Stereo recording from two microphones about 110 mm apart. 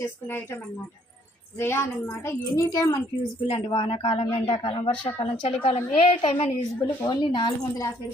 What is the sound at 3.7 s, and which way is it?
Speech, 55° left (ahead or behind).